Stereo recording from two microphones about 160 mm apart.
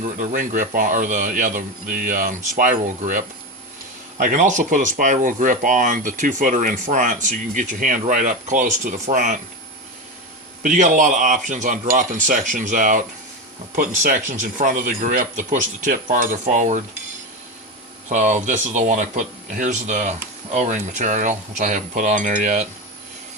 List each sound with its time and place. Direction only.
0.0 s a man's voice: 50° right (ahead or behind)
10.6 s speech: 55° right (ahead or behind)
18.1 s speech: 50° right (ahead or behind)